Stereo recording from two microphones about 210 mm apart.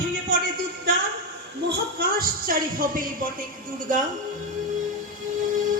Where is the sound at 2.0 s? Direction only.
45° right (ahead or behind).